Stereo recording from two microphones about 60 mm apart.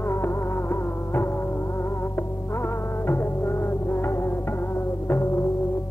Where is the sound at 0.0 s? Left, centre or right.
Left.